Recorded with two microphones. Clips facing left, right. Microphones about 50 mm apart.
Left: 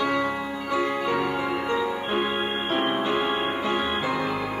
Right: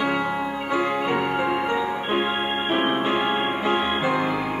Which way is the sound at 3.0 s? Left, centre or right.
Right.